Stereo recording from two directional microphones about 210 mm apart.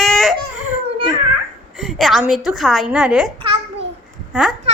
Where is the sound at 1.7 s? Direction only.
Centre (ahead or behind).